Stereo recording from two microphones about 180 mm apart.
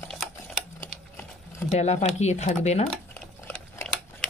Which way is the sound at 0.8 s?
10° left (ahead or behind).